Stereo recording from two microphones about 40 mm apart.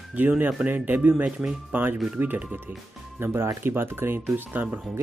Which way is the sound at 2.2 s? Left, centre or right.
Right.